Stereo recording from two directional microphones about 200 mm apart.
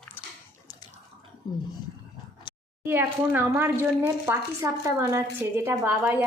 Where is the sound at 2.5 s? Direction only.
25° left (ahead or behind).